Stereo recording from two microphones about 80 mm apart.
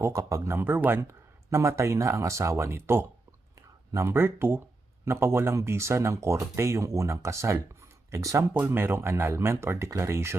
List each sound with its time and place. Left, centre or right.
0.0 s speech: right
1.0 s speech: right
8.5 s speech: right